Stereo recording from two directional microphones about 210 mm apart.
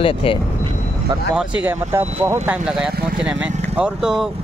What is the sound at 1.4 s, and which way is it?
Speech, 5° right (ahead or behind).